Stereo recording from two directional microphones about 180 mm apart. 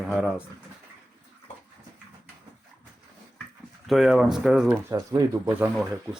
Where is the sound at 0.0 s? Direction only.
Centre (ahead or behind).